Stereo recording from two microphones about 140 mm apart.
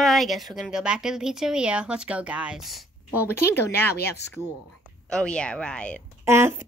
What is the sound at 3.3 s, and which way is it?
Speech, 15° left (ahead or behind).